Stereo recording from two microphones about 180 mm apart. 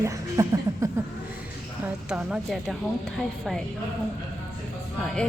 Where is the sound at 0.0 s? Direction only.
15° right (ahead or behind).